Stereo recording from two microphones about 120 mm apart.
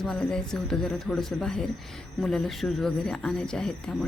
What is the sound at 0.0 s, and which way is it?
Speech, 5° left (ahead or behind).